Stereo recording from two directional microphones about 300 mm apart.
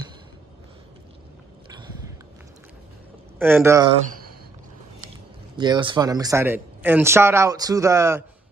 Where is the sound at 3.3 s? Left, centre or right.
Centre.